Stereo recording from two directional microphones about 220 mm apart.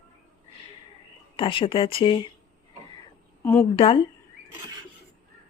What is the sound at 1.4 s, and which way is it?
Speech, 25° left (ahead or behind).